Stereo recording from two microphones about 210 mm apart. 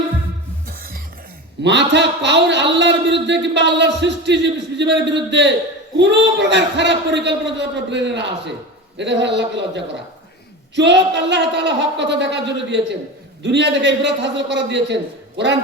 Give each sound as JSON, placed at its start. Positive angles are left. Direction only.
{"t": 0.7, "sound": "music", "side_deg": -45}
{"t": 1.6, "sound": "a man's voice", "side_deg": -55}